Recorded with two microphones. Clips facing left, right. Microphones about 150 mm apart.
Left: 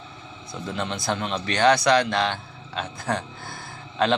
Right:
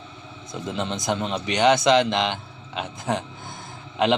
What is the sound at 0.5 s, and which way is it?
A man's voice, 20° right (ahead or behind).